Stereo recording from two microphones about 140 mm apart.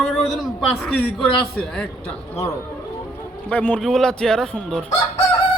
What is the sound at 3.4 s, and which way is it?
A man's voice, 10° left (ahead or behind).